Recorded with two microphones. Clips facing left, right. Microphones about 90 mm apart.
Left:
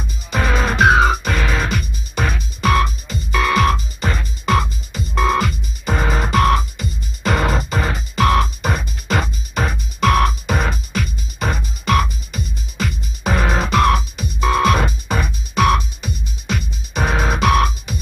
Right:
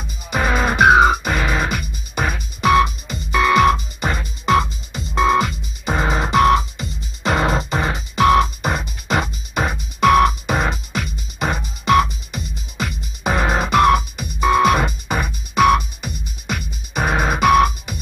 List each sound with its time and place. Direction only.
0.3 s music: 15° right (ahead or behind)